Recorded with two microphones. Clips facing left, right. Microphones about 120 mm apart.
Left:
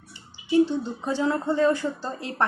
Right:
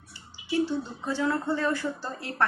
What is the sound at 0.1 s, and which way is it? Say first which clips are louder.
A woman's voice: left 7 dB; 20° left (ahead or behind).